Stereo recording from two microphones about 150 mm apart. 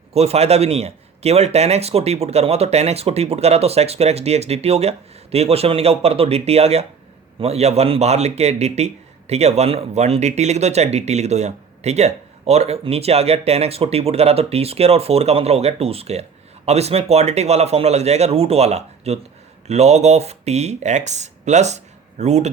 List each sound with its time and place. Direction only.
0.1 s a man's voice: 45° right (ahead or behind)